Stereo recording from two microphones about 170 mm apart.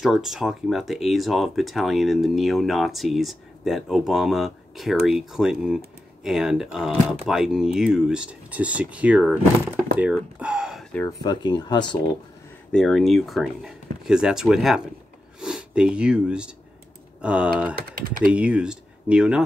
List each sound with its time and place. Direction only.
0.0 s speech: centre (ahead or behind)
11.1 s speech: 25° left (ahead or behind)
12.7 s speech: centre (ahead or behind)
17.7 s speech: 60° right (ahead or behind)
18.3 s speech: 5° right (ahead or behind)